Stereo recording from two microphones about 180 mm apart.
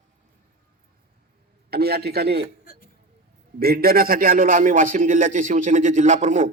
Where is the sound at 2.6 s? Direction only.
55° left (ahead or behind).